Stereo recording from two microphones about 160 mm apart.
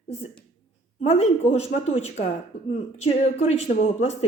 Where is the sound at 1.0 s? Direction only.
45° left (ahead or behind).